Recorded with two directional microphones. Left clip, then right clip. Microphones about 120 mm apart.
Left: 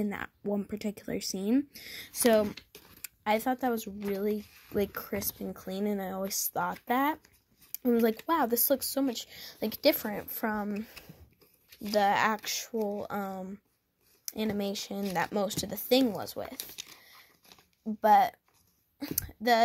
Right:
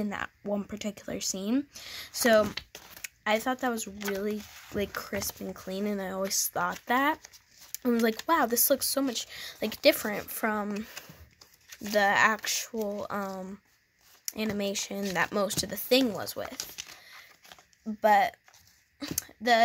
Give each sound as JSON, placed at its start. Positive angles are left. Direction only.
{"t": 0.0, "sound": "speech", "side_deg": 0}
{"t": 11.8, "sound": "speech", "side_deg": -10}